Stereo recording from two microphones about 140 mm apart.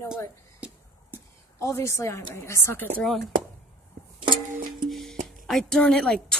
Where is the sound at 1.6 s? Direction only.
20° left (ahead or behind).